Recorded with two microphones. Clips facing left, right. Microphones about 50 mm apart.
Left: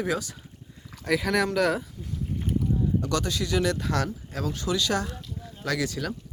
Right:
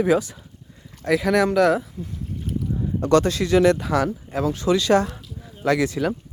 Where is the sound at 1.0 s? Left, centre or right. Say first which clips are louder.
Right 6 dB; centre.